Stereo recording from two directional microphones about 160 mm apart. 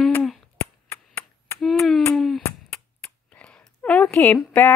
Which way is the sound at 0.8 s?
15° left (ahead or behind).